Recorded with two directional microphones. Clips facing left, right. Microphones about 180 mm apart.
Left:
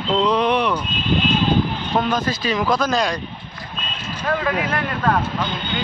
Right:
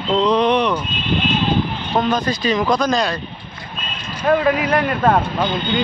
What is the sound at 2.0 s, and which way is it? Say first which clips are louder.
A man's voice: right 4 dB; 5° left (ahead or behind).